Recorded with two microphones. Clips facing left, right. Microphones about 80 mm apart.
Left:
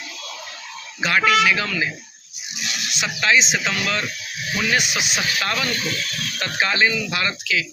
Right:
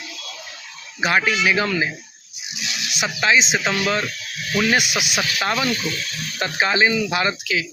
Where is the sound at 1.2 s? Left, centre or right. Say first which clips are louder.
Left 5 dB; left.